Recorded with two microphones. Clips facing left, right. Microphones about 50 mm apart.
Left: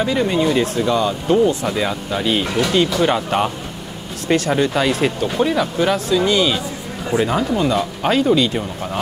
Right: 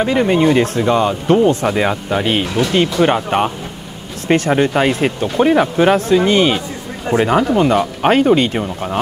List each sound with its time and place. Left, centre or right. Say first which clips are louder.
0.0 s speech: right 4 dB; right
1.7 s speech: right 4 dB; right
4.6 s speech: right 3 dB; right